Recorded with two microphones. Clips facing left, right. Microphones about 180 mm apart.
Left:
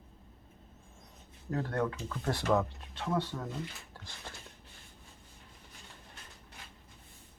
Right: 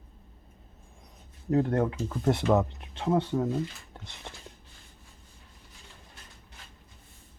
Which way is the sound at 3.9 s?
20° right (ahead or behind).